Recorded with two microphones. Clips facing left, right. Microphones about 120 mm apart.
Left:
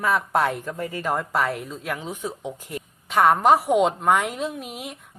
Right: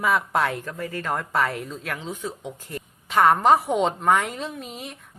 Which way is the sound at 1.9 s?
15° left (ahead or behind).